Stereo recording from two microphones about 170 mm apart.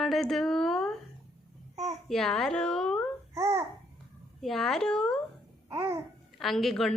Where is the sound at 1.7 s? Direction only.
40° right (ahead or behind).